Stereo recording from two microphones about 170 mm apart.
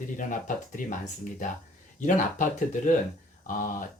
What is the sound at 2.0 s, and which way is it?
Speech, 50° left (ahead or behind).